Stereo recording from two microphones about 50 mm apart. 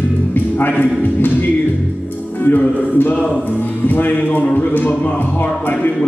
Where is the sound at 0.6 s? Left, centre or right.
Left.